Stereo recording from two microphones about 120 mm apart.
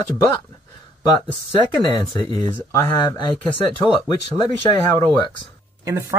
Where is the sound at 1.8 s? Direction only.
35° left (ahead or behind).